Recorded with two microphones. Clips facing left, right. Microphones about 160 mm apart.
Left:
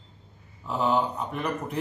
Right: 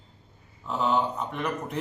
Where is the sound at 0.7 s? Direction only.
5° left (ahead or behind).